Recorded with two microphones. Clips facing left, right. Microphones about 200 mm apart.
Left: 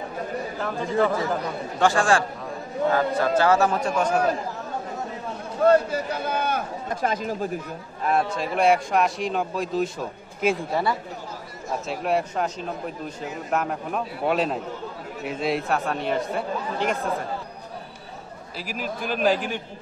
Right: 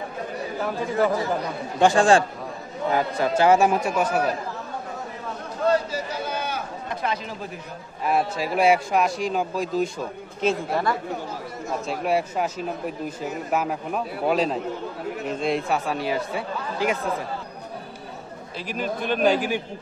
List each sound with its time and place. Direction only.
0.6 s speech: 5° right (ahead or behind)
1.8 s a man's voice: 20° right (ahead or behind)
5.7 s a man's voice: 55° left (ahead or behind)
8.0 s speech: 5° right (ahead or behind)
10.4 s a woman's voice: 10° left (ahead or behind)
11.9 s speech: centre (ahead or behind)
18.7 s speech: 5° left (ahead or behind)